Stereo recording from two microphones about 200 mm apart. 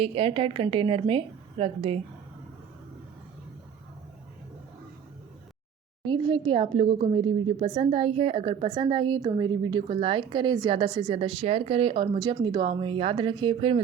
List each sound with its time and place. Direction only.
0.0 s a woman's voice: 30° right (ahead or behind)
6.1 s a woman's voice: 25° right (ahead or behind)